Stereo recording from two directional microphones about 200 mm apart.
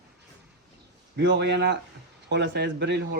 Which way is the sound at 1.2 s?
60° right (ahead or behind).